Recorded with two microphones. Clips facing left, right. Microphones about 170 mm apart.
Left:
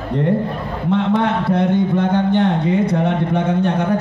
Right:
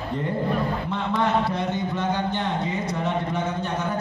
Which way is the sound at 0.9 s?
60° left (ahead or behind).